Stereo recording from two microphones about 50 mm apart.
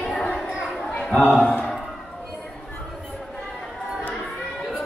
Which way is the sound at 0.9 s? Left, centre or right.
Centre.